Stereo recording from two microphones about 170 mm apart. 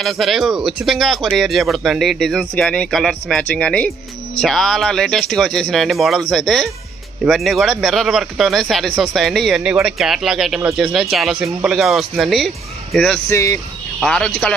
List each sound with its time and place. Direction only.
0.0 s speech: centre (ahead or behind)
13.3 s speech: 15° left (ahead or behind)
14.0 s speech: 5° left (ahead or behind)